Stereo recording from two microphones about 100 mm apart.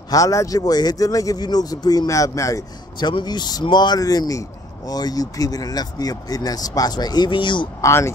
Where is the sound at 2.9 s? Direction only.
45° left (ahead or behind).